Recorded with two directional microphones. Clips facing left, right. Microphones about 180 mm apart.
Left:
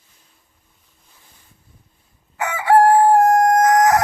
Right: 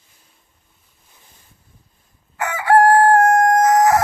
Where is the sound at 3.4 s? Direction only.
20° left (ahead or behind).